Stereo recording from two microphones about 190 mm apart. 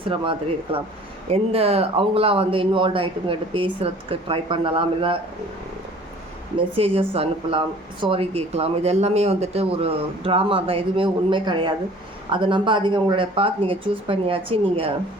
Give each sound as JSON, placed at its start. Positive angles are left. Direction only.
{"t": 0.0, "sound": "speech", "side_deg": -30}
{"t": 6.7, "sound": "speech", "side_deg": -30}